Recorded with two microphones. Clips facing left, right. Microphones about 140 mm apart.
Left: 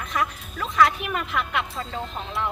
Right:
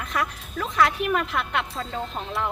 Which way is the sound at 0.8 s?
Centre (ahead or behind).